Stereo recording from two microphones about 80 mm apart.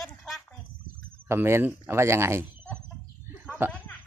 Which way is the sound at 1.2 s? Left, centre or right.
Right.